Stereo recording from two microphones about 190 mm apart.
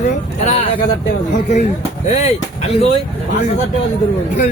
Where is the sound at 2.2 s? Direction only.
35° left (ahead or behind).